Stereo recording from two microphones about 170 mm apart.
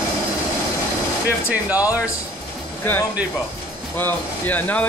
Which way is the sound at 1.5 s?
10° right (ahead or behind).